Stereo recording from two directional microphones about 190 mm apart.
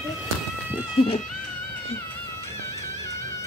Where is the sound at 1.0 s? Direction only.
30° left (ahead or behind).